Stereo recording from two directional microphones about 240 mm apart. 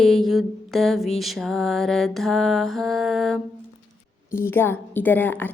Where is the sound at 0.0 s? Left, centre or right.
Centre.